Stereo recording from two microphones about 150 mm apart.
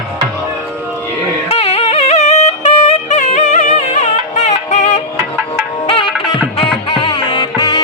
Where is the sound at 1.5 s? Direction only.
40° left (ahead or behind).